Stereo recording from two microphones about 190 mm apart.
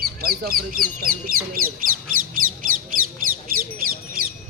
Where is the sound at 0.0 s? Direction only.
50° right (ahead or behind).